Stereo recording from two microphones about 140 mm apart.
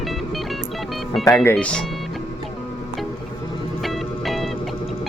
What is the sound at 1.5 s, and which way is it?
Speech, 10° left (ahead or behind).